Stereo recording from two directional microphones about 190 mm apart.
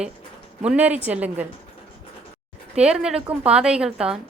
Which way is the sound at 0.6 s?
5° right (ahead or behind).